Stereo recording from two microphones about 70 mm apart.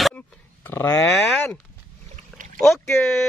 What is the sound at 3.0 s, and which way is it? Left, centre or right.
Cat, centre.